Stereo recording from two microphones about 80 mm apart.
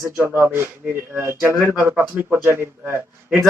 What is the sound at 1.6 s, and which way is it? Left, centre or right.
A man's voice, right.